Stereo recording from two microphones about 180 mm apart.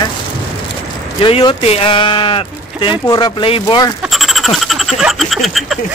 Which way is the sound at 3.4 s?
30° left (ahead or behind).